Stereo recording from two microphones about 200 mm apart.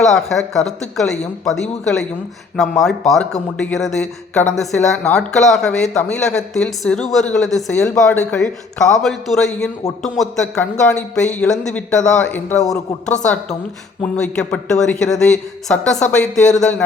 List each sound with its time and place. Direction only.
0.0 s a woman's voice: centre (ahead or behind)